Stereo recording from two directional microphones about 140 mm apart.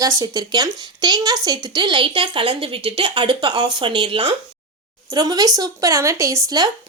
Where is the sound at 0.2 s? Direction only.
25° right (ahead or behind).